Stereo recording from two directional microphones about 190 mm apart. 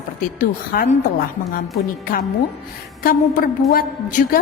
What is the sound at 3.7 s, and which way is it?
Speech, 50° left (ahead or behind).